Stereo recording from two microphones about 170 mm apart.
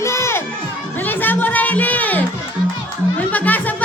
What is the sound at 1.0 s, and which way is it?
Chatter, 10° left (ahead or behind).